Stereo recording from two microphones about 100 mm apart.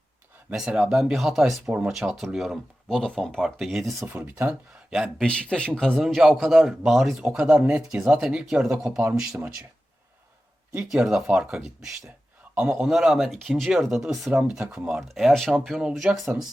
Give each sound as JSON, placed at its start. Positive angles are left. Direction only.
{"t": 0.5, "sound": "speech", "side_deg": -5}
{"t": 5.1, "sound": "speech", "side_deg": 10}
{"t": 7.3, "sound": "speech", "side_deg": -15}
{"t": 10.9, "sound": "speech", "side_deg": -5}
{"t": 12.5, "sound": "a man's voice", "side_deg": -20}
{"t": 12.8, "sound": "speech", "side_deg": -5}
{"t": 15.0, "sound": "speech", "side_deg": 0}